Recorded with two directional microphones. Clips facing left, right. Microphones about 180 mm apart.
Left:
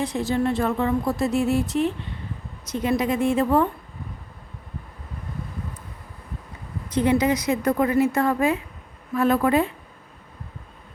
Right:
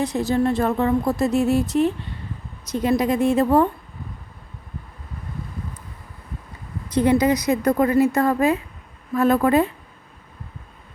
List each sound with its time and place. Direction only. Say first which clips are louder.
0.0 s speech: right 3 dB; 40° right (ahead or behind)
6.9 s speech: right 3 dB; 40° right (ahead or behind)